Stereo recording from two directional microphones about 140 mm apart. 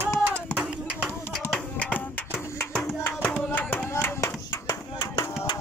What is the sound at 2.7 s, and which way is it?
Music, 5° left (ahead or behind).